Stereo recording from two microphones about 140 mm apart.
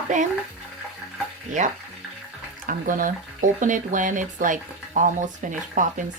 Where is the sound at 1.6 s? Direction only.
60° right (ahead or behind).